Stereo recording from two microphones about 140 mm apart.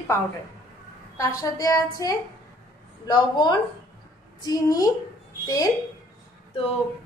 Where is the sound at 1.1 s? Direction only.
25° left (ahead or behind).